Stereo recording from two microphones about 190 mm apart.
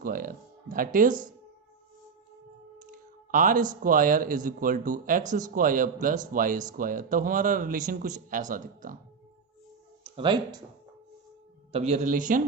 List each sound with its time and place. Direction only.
0.0 s music: 50° right (ahead or behind)
2.7 s speech: 45° right (ahead or behind)
10.0 s speech: 25° right (ahead or behind)
11.7 s a man's voice: 35° right (ahead or behind)